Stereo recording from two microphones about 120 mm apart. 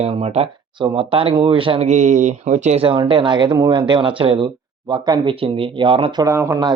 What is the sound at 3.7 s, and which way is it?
Speech, 45° right (ahead or behind).